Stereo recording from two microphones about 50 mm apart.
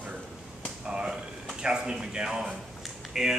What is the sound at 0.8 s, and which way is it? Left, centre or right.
Speech, centre.